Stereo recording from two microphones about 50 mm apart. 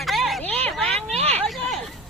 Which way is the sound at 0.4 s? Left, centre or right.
Left.